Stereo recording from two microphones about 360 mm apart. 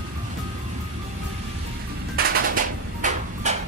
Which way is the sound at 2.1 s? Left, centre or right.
Right.